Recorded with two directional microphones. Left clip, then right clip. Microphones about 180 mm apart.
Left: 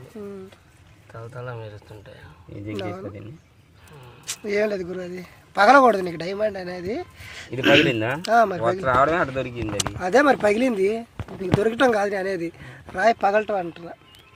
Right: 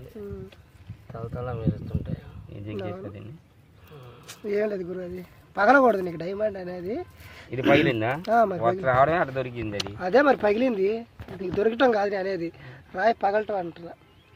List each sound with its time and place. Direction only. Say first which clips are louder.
1.1 s speech: right 1 dB; 25° right (ahead or behind)
2.7 s speech: left 3 dB; 5° right (ahead or behind)
4.3 s speech: left 4 dB; 5° right (ahead or behind)
7.9 s speech: left 2 dB; 20° left (ahead or behind)
8.2 s speech: left 4 dB; 15° right (ahead or behind)
8.8 s speech: left 2 dB; 25° left (ahead or behind)
9.7 s speech: left 2 dB; centre (ahead or behind)